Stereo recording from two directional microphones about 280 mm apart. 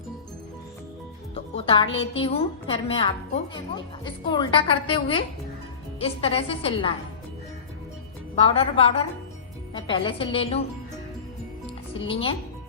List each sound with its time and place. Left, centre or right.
1.5 s a woman's voice: centre
8.4 s a woman's voice: left
11.6 s music: centre